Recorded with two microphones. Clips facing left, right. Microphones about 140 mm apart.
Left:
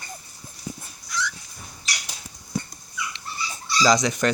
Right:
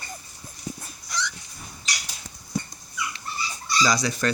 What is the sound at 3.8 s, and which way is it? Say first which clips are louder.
Speech: left 4 dB; 20° left (ahead or behind).